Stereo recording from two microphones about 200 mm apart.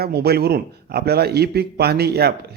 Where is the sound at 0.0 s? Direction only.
55° right (ahead or behind).